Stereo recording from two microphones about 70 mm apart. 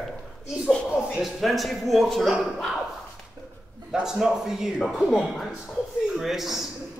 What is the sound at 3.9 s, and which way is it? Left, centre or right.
A man's voice, centre.